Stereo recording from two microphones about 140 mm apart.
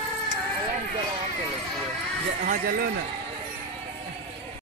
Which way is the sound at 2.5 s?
90° right.